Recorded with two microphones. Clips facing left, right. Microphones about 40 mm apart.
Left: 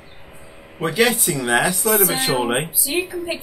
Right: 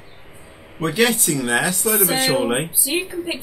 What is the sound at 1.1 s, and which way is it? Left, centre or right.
Speech, centre.